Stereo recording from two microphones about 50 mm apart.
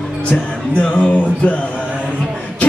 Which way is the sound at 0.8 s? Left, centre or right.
Left.